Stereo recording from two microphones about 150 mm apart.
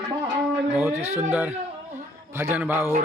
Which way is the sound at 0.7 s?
15° right (ahead or behind).